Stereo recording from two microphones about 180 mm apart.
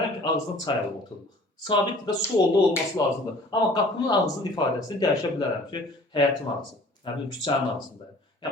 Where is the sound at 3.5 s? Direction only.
20° left (ahead or behind).